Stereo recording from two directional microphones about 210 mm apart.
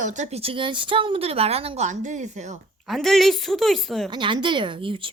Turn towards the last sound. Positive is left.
turn(degrees=-25)  # may be behind; listen again after turning